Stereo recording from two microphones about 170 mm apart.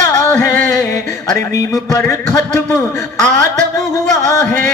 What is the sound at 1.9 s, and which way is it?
Music, 15° left (ahead or behind).